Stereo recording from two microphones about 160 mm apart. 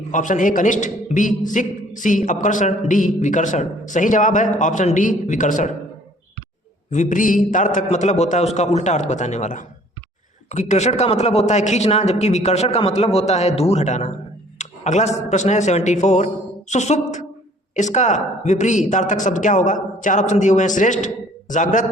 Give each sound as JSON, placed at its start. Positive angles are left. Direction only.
{"t": 0.1, "sound": "a man's voice", "side_deg": 55}
{"t": 6.9, "sound": "a man's voice", "side_deg": 50}